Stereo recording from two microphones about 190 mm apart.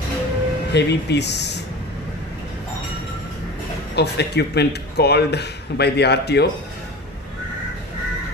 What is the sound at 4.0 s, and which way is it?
Speech, 60° left (ahead or behind).